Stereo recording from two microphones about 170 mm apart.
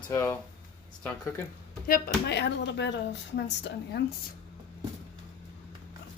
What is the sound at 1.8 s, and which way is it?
Speech, 60° left (ahead or behind).